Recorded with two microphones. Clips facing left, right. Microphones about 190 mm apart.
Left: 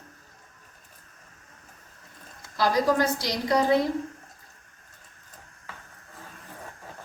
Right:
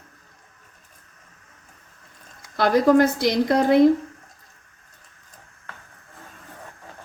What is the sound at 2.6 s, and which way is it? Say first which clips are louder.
A woman's voice: right 7 dB; 60° right (ahead or behind).